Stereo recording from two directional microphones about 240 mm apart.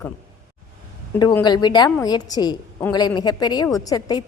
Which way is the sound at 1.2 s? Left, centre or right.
Centre.